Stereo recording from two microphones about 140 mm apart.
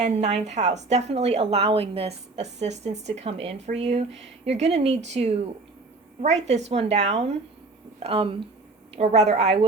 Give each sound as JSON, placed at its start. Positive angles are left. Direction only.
{"t": 0.0, "sound": "a woman's voice", "side_deg": -55}
{"t": 9.0, "sound": "a woman's voice", "side_deg": -50}